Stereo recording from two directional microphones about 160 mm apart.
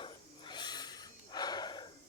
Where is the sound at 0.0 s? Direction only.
30° left (ahead or behind).